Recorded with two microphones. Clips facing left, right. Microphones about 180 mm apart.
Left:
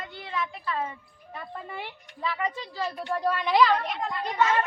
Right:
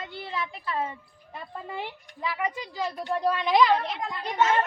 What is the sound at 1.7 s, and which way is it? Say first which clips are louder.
Speech: right 3 dB; 15° right (ahead or behind).